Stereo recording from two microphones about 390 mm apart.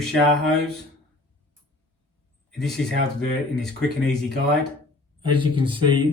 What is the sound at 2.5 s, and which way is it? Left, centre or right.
Speech, centre.